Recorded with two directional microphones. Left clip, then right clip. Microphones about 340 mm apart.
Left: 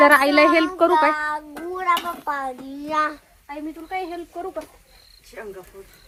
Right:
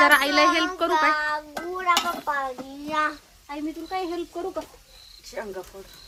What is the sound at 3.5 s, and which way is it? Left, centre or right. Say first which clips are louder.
Speech: even; centre.